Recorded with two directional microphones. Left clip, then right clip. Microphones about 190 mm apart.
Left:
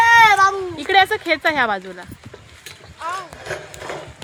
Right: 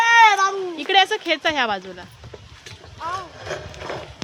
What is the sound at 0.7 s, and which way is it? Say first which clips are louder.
Speech: right 1 dB; 35° left (ahead or behind).